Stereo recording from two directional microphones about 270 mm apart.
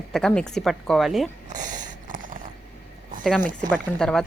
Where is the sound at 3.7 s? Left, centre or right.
Centre.